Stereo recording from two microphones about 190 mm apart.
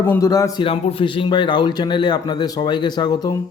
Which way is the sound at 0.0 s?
15° left (ahead or behind).